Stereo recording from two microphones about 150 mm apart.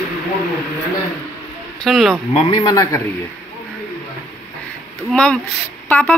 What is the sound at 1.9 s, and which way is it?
Speech, centre (ahead or behind).